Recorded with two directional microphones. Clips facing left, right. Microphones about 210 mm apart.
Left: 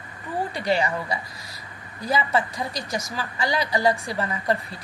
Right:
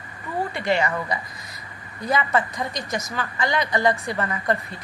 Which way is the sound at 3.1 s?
10° left (ahead or behind).